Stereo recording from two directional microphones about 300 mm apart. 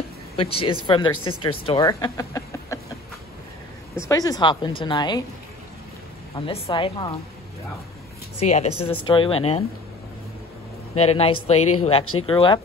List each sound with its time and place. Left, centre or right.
0.4 s a woman's voice: centre
4.0 s a woman's voice: centre
6.3 s a woman's voice: centre
8.4 s speech: left
11.0 s speech: centre
12.0 s speech: left
12.3 s a woman's voice: centre